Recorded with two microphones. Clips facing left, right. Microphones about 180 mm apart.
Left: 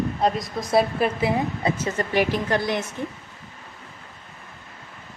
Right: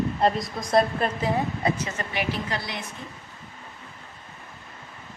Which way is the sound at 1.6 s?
25° left (ahead or behind).